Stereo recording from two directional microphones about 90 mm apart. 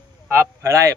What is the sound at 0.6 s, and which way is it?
Speech, 35° right (ahead or behind).